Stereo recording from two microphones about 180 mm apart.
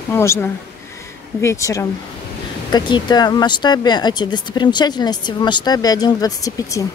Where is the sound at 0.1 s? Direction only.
15° left (ahead or behind).